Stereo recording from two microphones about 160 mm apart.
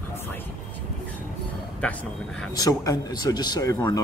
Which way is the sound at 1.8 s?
5° left (ahead or behind).